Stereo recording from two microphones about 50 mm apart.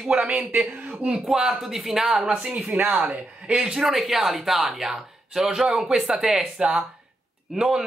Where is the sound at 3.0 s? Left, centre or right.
Centre.